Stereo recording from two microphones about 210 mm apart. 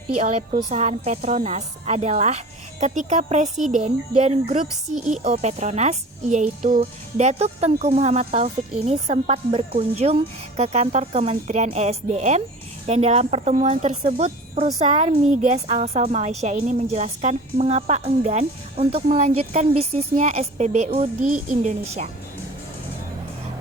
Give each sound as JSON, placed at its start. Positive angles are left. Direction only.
{"t": 0.2, "sound": "a woman's voice", "side_deg": -30}